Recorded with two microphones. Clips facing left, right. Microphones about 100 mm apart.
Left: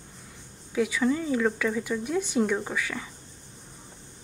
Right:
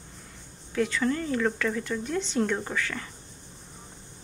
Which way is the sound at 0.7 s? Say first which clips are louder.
Left 1 dB; 10° left (ahead or behind).